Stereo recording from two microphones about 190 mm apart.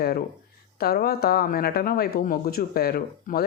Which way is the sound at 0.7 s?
55° left (ahead or behind).